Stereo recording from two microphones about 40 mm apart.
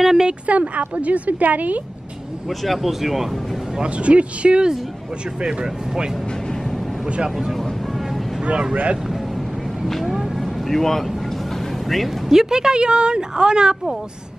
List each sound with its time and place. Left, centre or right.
0.0 s a sound: centre
0.5 s a woman's voice: right
2.6 s speech: centre
3.7 s speech: right
9.8 s speech: centre
10.1 s vehicle: centre
10.4 s vehicle: centre
12.3 s speech: centre